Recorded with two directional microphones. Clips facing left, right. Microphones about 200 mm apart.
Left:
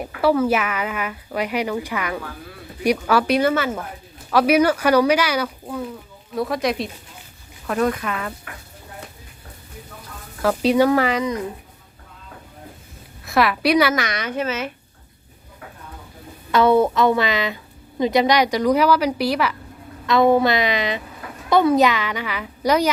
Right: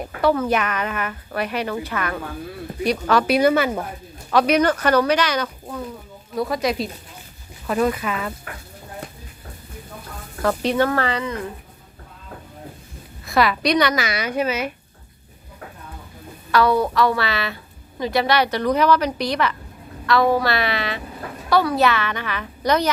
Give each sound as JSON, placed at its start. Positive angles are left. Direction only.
{"t": 0.0, "sound": "a woman's voice", "side_deg": 10}
{"t": 3.2, "sound": "speech", "side_deg": -10}
{"t": 4.3, "sound": "a woman's voice", "side_deg": 5}
{"t": 10.4, "sound": "a woman's voice", "side_deg": 5}
{"t": 13.2, "sound": "a woman's voice", "side_deg": 0}
{"t": 16.5, "sound": "a woman's voice", "side_deg": 25}
{"t": 20.1, "sound": "a woman's voice", "side_deg": 20}